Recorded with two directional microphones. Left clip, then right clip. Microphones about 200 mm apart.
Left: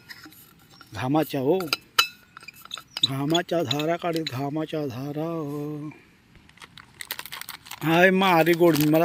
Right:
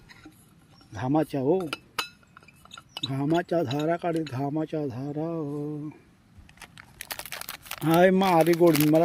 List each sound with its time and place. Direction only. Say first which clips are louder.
0.9 s speech: left 2 dB; centre (ahead or behind)
1.6 s chink: left 9 dB; centre (ahead or behind)
2.7 s speech: left 7 dB; centre (ahead or behind)
5.4 s a sound: left 1 dB; 15° left (ahead or behind)
7.1 s typing: left 1 dB; 25° right (ahead or behind)
7.9 s speech: left 2 dB; 15° right (ahead or behind)